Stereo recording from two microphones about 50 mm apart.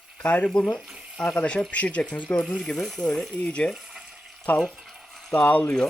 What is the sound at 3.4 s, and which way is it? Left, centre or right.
Speech, left.